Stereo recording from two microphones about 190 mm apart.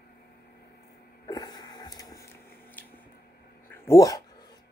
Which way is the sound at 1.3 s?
20° left (ahead or behind).